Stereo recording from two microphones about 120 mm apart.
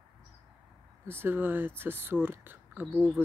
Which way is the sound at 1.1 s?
20° right (ahead or behind).